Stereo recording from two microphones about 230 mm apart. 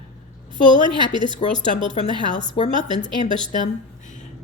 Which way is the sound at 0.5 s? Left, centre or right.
Right.